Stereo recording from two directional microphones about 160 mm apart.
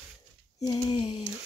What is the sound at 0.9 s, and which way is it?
Speech, 40° left (ahead or behind).